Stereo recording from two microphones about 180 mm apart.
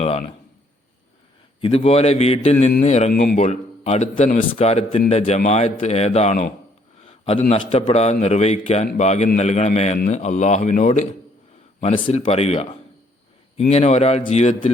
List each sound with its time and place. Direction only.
0.0 s a sound: 35° left (ahead or behind)
1.6 s a man's voice: 35° left (ahead or behind)
3.1 s a man's voice: 50° left (ahead or behind)
7.0 s a sound: 35° left (ahead or behind)
7.5 s a man's voice: 35° left (ahead or behind)
11.8 s a man's voice: 35° left (ahead or behind)